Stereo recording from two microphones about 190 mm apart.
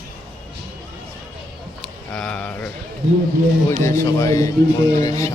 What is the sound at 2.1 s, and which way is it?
Speech, 5° left (ahead or behind).